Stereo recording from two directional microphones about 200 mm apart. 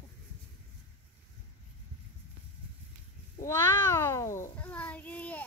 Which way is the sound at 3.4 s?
15° left (ahead or behind).